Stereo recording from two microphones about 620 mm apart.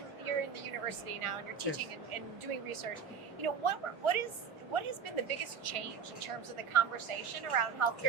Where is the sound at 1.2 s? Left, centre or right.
Right.